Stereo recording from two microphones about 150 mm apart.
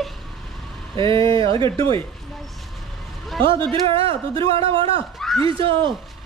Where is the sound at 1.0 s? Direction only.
35° right (ahead or behind).